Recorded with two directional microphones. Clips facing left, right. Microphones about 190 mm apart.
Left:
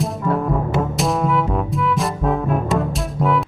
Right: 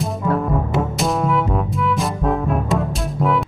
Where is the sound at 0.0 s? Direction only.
Centre (ahead or behind).